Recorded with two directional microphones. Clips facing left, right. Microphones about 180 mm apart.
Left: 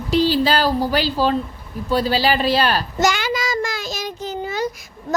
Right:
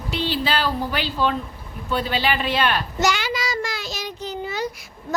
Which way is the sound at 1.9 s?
35° left (ahead or behind).